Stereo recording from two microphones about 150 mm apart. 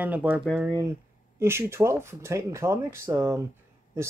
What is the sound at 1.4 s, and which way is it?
Speech, 15° right (ahead or behind).